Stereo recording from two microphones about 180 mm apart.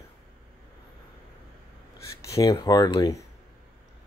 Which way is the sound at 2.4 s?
20° left (ahead or behind).